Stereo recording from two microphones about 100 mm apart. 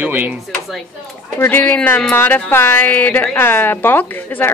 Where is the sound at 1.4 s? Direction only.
15° left (ahead or behind).